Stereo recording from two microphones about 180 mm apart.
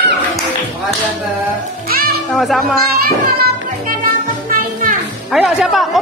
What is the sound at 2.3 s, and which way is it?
Speech, centre (ahead or behind).